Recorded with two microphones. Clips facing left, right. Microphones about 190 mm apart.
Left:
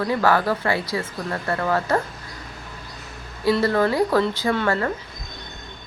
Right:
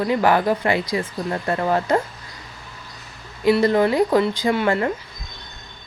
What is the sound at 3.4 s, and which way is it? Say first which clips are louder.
Speech: right 3 dB; 15° right (ahead or behind).